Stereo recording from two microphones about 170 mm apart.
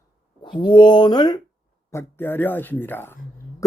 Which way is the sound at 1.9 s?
10° left (ahead or behind).